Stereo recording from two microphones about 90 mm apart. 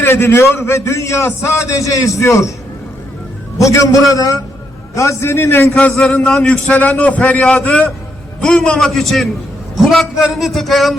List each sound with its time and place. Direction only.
0.0 s a man's voice: 25° left (ahead or behind)
3.6 s a man's voice: 35° left (ahead or behind)
5.7 s a man's voice: 10° left (ahead or behind)